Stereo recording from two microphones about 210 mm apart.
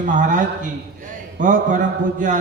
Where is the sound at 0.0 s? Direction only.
40° right (ahead or behind).